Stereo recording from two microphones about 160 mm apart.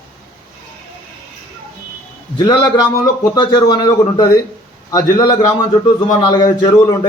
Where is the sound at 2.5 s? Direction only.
25° left (ahead or behind).